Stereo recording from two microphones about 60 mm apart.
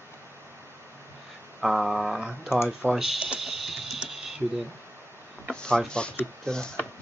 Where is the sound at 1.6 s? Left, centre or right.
Centre.